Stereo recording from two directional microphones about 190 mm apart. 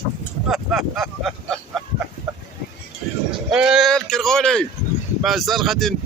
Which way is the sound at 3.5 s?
5° right (ahead or behind).